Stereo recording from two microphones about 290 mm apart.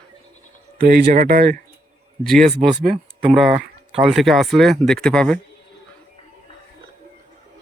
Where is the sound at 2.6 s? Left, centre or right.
Right.